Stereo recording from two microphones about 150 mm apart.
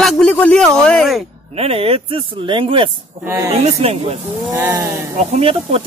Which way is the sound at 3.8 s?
40° right (ahead or behind).